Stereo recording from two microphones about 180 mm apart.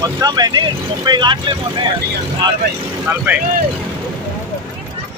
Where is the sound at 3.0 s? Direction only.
10° right (ahead or behind).